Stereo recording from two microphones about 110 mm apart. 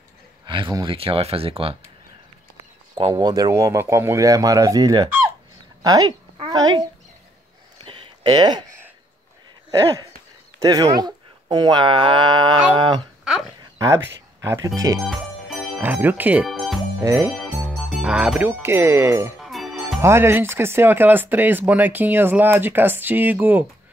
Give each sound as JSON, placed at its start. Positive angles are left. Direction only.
{"t": 0.5, "sound": "speech", "side_deg": -50}
{"t": 3.2, "sound": "a woman's voice", "side_deg": -35}
{"t": 7.8, "sound": "a sound", "side_deg": -45}
{"t": 10.6, "sound": "speech", "side_deg": -35}
{"t": 13.7, "sound": "speech", "side_deg": -25}
{"t": 15.0, "sound": "music", "side_deg": 0}
{"t": 15.8, "sound": "speech", "side_deg": -15}
{"t": 16.4, "sound": "music", "side_deg": 0}
{"t": 17.0, "sound": "speech", "side_deg": -30}
{"t": 17.3, "sound": "music", "side_deg": 0}
{"t": 18.6, "sound": "speech", "side_deg": -20}
{"t": 19.3, "sound": "music", "side_deg": 0}
{"t": 20.0, "sound": "speech", "side_deg": -25}